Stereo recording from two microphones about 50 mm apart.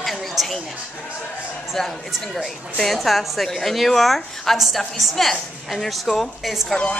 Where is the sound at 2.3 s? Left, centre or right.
Centre.